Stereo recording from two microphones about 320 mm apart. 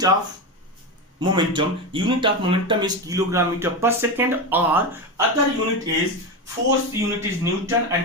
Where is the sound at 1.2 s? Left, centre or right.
Centre.